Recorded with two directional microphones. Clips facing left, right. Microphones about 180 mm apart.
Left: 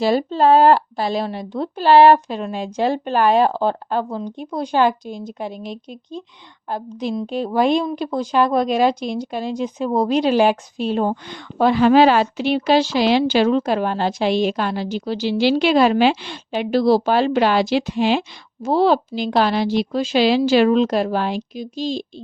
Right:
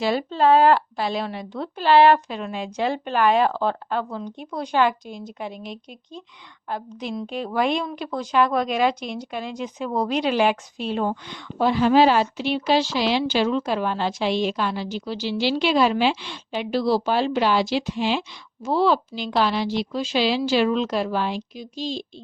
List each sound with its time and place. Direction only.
0.0 s speech: 40° left (ahead or behind)
11.5 s speech: 70° left (ahead or behind); by 22.0 s 50° left (ahead or behind)